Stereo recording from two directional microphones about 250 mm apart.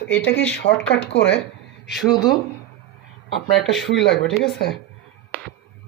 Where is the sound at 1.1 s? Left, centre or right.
Left.